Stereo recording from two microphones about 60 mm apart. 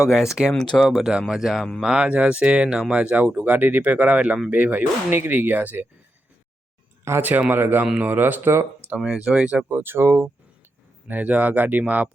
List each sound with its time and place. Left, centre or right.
0.1 s speech: centre
0.5 s speech: centre
0.8 s speech: centre
1.8 s speech: centre
7.2 s speech: right
9.0 s speech: centre
9.7 s speech: right
11.1 s speech: right